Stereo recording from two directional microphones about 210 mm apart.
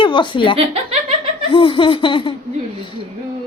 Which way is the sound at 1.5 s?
25° left (ahead or behind).